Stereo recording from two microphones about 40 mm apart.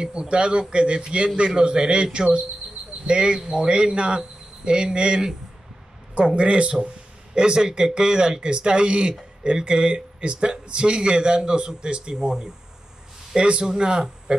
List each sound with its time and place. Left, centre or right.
0.0 s speech: right
13.4 s speech: right